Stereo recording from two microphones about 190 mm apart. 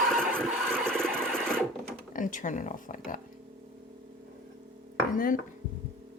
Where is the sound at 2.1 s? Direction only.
40° left (ahead or behind).